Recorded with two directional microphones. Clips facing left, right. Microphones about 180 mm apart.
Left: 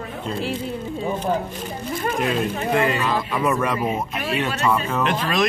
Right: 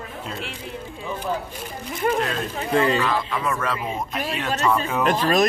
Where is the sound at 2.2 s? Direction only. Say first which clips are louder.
Left 3 dB; 10° left (ahead or behind).